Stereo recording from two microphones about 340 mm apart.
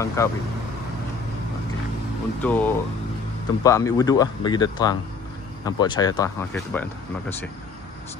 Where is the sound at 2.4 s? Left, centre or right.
Centre.